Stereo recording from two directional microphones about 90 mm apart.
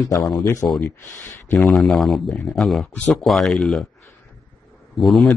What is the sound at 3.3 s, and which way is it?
Speech, centre (ahead or behind).